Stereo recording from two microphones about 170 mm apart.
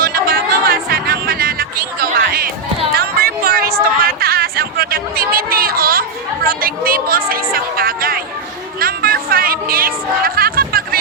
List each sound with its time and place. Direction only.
0.0 s music: 60° right (ahead or behind)
2.9 s a sound: 65° right (ahead or behind)
4.0 s chatter: 60° right (ahead or behind)
8.8 s music: 60° right (ahead or behind)